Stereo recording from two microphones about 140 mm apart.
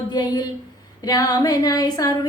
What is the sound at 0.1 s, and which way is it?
Speech, 30° left (ahead or behind).